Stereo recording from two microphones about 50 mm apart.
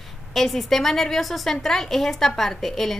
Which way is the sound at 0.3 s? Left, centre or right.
Centre.